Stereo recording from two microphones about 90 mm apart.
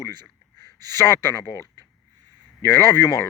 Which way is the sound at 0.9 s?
30° left (ahead or behind).